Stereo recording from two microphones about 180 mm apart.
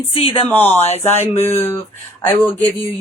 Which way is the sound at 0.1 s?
30° left (ahead or behind).